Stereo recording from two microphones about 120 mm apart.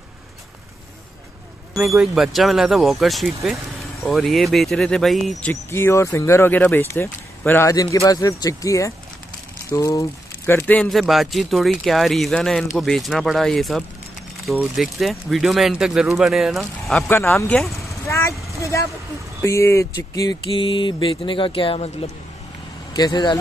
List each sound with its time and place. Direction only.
1.9 s speech: 5° right (ahead or behind)
5.5 s speech: 20° left (ahead or behind)
10.4 s speech: 15° left (ahead or behind)
10.8 s speech: centre (ahead or behind)
17.1 s speech: 20° left (ahead or behind)
17.6 s speech: centre (ahead or behind)
18.0 s vehicle: 25° left (ahead or behind)
19.4 s speech: 25° left (ahead or behind)
20.5 s music: 45° left (ahead or behind)
22.9 s speech: 35° left (ahead or behind)